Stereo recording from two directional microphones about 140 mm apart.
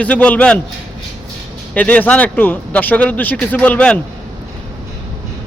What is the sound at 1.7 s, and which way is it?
Speech, 10° left (ahead or behind).